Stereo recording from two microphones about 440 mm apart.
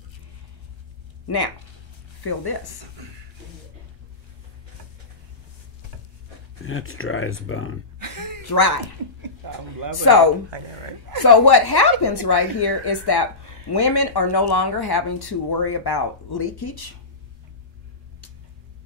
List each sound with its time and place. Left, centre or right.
1.2 s speech: left
6.6 s speech: left
8.0 s a sound: right
8.5 s speech: left
10.1 s speech: left
11.2 s speech: left